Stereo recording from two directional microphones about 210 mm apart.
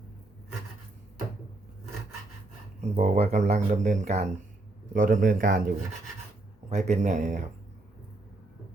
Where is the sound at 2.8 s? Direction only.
35° right (ahead or behind).